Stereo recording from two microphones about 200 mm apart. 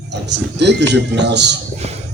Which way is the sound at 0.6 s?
60° right (ahead or behind).